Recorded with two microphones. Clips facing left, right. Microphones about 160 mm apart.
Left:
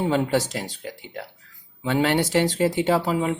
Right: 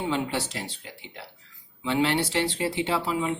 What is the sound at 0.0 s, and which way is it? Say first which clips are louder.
Speech: left 6 dB; 45° left (ahead or behind).